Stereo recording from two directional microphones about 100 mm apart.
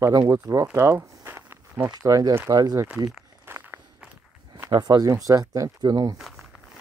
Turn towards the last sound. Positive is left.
turn(degrees=0)  # may be behind; listen again after turning